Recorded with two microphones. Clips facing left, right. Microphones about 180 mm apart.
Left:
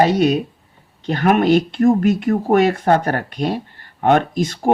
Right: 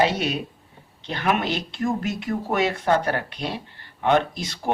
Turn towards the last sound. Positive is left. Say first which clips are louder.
# left 8 dB
turn(degrees=50)  # may be behind; listen again after turning